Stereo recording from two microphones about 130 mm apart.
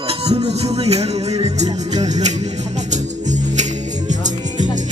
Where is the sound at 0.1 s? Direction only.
55° right (ahead or behind).